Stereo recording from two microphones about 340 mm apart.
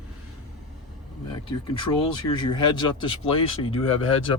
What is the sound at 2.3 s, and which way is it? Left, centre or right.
Speech, centre.